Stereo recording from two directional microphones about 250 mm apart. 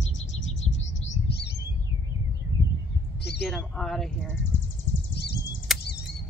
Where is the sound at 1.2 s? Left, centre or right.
Left.